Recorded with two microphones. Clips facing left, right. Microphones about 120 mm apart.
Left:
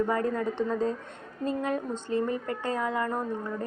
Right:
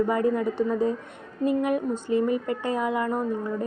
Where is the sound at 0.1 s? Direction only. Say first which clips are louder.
Right 4 dB; 15° right (ahead or behind).